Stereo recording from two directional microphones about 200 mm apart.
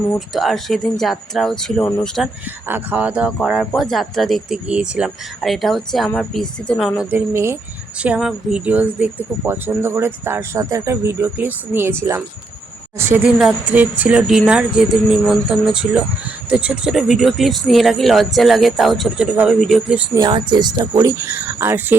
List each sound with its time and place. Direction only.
0.1 s speech: centre (ahead or behind)
20.1 s speech: 20° right (ahead or behind)